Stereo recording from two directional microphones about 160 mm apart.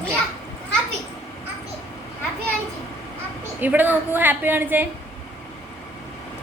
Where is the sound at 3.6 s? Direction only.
10° right (ahead or behind).